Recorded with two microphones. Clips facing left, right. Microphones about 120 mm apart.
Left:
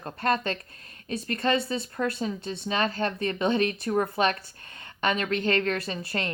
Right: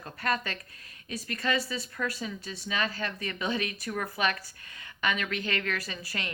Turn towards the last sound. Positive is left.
turn(degrees=35)  # may be behind; listen again after turning